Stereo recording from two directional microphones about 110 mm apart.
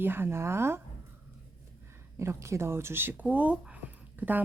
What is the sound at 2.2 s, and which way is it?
Speech, 25° right (ahead or behind).